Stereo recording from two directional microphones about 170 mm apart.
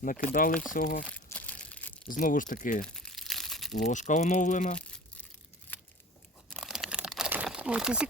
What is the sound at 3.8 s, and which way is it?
Speech, 45° left (ahead or behind).